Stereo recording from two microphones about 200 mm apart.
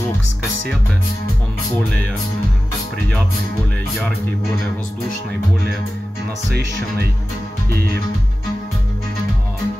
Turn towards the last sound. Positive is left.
turn(degrees=-50)  # may be behind; listen again after turning